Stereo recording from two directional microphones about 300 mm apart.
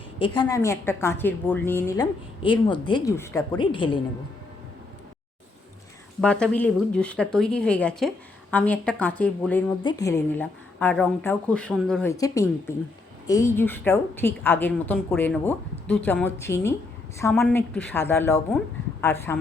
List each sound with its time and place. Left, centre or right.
0.2 s a woman's voice: centre
6.2 s a woman's voice: centre